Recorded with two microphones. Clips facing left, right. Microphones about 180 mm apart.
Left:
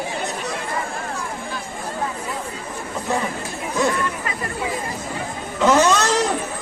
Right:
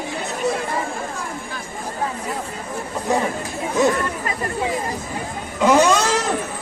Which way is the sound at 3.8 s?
20° right (ahead or behind).